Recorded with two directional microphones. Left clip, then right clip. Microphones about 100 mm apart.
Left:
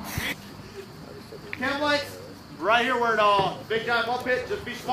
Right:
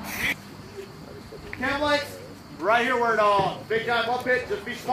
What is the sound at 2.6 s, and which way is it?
A man's voice, 35° left (ahead or behind).